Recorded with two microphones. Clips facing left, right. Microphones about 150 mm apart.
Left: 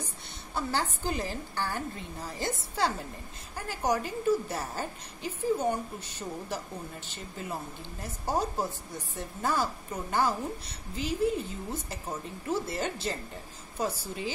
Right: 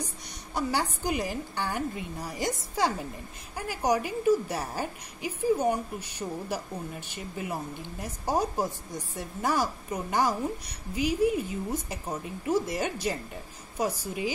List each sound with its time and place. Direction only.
0.6 s a woman's voice: 15° right (ahead or behind)